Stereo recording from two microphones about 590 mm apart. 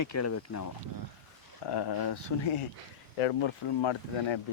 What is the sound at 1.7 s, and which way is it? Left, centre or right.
Speech, left.